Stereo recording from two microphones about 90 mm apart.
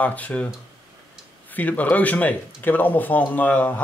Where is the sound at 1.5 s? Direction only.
20° left (ahead or behind).